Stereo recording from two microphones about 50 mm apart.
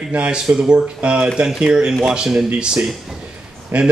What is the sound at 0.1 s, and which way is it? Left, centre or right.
Speech, right.